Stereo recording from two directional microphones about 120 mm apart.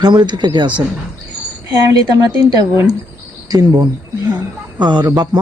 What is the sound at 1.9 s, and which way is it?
Speech, 35° right (ahead or behind).